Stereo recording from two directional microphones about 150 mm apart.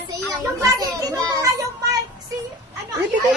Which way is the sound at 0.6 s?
25° right (ahead or behind).